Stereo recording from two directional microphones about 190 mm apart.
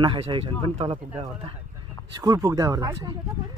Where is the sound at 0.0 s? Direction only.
25° right (ahead or behind).